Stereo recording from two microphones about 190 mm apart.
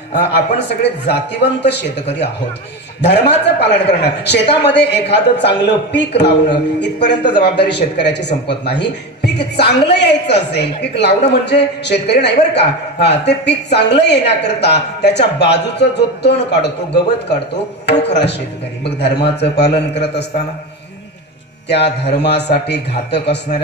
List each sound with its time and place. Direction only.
0.6 s a man's voice: 65° left (ahead or behind)
21.6 s a man's voice: 65° left (ahead or behind)